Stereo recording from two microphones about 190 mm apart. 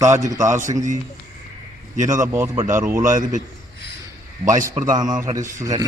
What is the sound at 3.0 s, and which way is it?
Speech, 45° right (ahead or behind).